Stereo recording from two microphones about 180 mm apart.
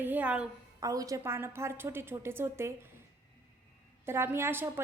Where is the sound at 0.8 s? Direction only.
20° right (ahead or behind).